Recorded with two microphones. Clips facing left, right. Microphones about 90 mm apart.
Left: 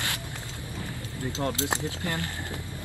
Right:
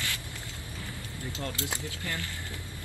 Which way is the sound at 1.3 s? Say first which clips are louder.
Left 7 dB; 20° left (ahead or behind).